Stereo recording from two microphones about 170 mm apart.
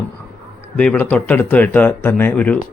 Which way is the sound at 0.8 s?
10° left (ahead or behind).